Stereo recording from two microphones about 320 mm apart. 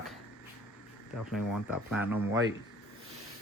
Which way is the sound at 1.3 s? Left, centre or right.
Centre.